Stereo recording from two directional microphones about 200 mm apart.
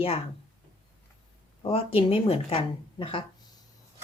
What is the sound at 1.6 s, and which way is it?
Speech, 30° left (ahead or behind).